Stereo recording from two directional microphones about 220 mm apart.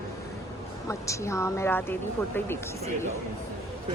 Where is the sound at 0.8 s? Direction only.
15° left (ahead or behind).